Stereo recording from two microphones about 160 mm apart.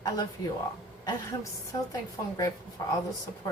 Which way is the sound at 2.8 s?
20° left (ahead or behind).